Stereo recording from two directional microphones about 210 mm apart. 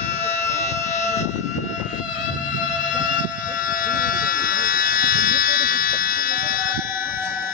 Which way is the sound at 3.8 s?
40° left (ahead or behind).